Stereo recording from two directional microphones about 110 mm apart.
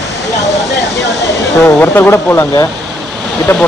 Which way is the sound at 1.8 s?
20° left (ahead or behind).